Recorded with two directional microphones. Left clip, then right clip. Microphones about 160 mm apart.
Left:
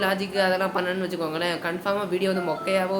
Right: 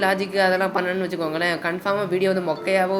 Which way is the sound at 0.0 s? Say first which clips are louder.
Right 4 dB; 25° right (ahead or behind).